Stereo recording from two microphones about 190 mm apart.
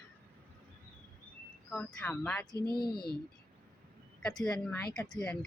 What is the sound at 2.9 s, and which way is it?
Speech, 55° left (ahead or behind).